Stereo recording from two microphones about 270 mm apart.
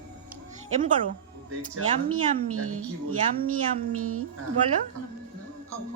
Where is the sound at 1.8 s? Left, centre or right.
Right.